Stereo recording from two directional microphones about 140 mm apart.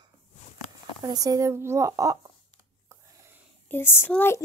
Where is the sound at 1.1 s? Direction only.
25° right (ahead or behind).